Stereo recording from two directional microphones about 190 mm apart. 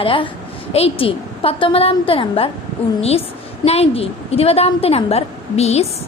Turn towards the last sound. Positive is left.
turn(degrees=35)  # may be behind; listen again after turning